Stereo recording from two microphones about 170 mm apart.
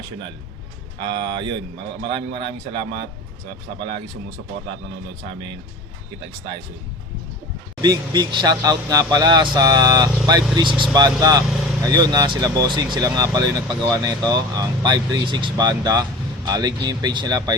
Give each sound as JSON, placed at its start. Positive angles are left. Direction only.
{"t": 1.0, "sound": "speech", "side_deg": -30}
{"t": 7.8, "sound": "speech", "side_deg": -25}